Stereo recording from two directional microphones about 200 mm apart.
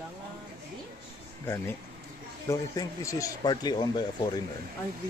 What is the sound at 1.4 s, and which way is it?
Speech, 15° left (ahead or behind).